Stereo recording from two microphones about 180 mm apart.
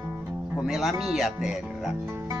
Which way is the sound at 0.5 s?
Centre (ahead or behind).